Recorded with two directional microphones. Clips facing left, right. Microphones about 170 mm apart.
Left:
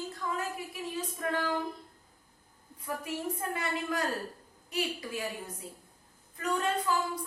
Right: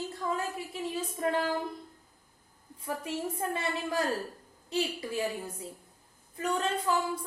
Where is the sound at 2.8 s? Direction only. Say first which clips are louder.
Right 1 dB; 25° right (ahead or behind).